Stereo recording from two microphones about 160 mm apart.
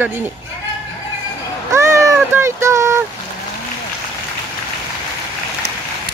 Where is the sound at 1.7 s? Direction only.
20° right (ahead or behind).